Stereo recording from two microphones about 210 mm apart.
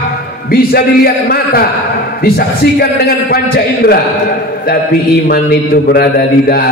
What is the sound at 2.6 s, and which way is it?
Speech, 50° left (ahead or behind).